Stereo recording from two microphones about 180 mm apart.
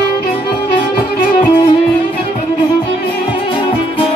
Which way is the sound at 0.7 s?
30° left (ahead or behind).